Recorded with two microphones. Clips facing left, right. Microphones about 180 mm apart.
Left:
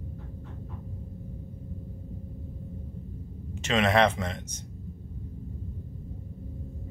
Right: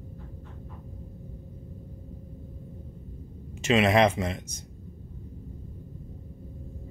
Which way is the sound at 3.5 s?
10° right (ahead or behind).